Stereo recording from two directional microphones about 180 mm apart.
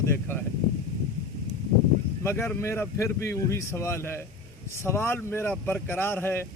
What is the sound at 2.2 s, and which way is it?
Speech, 10° left (ahead or behind).